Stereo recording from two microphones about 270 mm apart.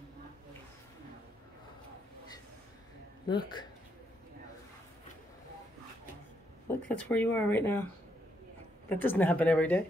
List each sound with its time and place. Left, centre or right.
3.3 s speech: centre
6.9 s speech: centre
8.9 s speech: centre